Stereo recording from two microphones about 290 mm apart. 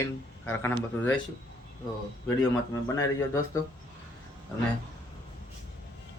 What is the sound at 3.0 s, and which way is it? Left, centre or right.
Speech, centre.